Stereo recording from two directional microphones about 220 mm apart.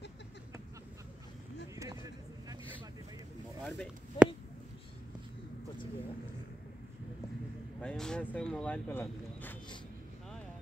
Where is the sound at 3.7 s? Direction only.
Centre (ahead or behind).